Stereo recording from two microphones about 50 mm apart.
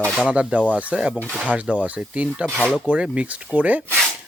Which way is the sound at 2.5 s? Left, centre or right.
Centre.